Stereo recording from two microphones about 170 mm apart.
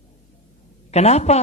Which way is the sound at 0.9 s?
40° left (ahead or behind).